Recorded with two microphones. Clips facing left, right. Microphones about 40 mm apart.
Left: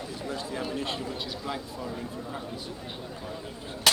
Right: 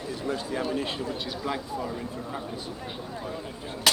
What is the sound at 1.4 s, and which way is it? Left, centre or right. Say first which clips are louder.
Speech: right 4 dB; centre.